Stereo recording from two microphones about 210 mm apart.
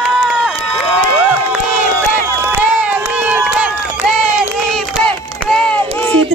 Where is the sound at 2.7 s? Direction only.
5° right (ahead or behind).